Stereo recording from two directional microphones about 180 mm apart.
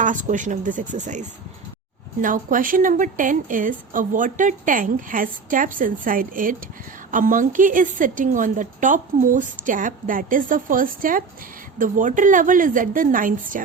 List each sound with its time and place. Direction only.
0.0 s a woman's voice: 45° right (ahead or behind)